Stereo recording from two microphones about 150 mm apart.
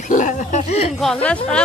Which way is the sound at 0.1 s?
60° left (ahead or behind).